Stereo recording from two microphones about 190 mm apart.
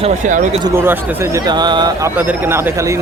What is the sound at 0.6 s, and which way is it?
A man's voice, 10° right (ahead or behind).